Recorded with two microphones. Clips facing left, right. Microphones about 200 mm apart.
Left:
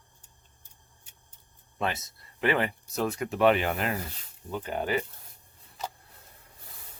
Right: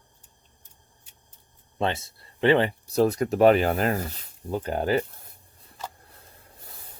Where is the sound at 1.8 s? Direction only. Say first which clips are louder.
Right 4 dB; 30° right (ahead or behind).